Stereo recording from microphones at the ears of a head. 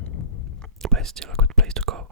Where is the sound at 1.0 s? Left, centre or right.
Right.